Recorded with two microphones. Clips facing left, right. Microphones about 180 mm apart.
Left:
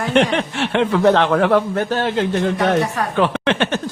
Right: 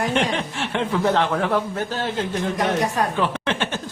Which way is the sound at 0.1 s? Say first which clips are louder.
Left 6 dB; 75° left (ahead or behind).